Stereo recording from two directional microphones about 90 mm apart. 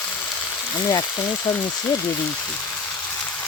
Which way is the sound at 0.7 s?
50° left (ahead or behind).